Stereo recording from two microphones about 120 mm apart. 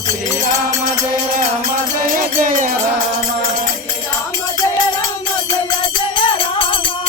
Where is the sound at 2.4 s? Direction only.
90° right.